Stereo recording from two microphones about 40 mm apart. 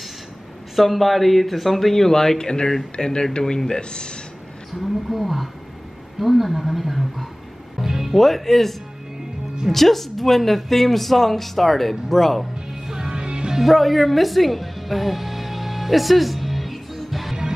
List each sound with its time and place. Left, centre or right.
0.7 s speech: centre; by 4.2 s left
5.1 s speech: centre
8.2 s speech: centre
12.8 s music: centre
13.6 s music: centre